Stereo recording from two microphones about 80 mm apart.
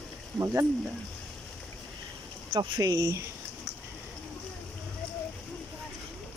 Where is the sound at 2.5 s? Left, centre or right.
Right.